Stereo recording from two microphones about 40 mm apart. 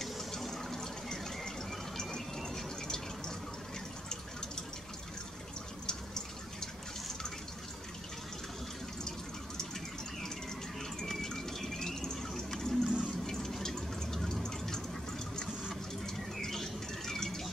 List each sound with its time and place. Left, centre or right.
0.0 s a sound: centre
5.9 s water: centre
10.8 s fill: centre
16.3 s bird: centre